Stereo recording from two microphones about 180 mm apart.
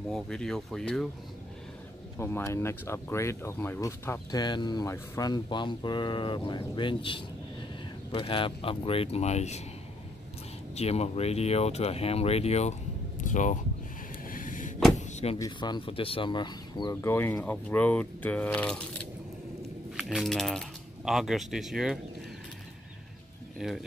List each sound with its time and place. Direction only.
0.1 s speech: 5° left (ahead or behind)
2.1 s speech: 15° left (ahead or behind); by 9.6 s 40° left (ahead or behind)
10.7 s speech: 35° left (ahead or behind)
14.2 s a sound: 50° left (ahead or behind)
15.0 s door: 40° left (ahead or behind)
15.3 s speech: 20° left (ahead or behind)
20.0 s speech: centre (ahead or behind)
23.6 s speech: 5° right (ahead or behind)